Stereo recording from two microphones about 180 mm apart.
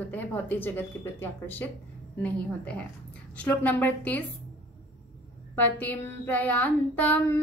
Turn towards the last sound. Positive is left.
turn(degrees=10)  # may be behind; listen again after turning